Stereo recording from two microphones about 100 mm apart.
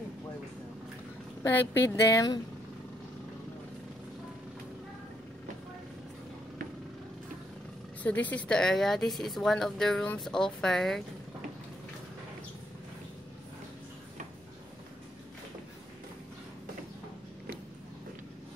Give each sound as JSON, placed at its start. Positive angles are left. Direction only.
{"t": 1.4, "sound": "speech", "side_deg": 25}
{"t": 8.0, "sound": "speech", "side_deg": 15}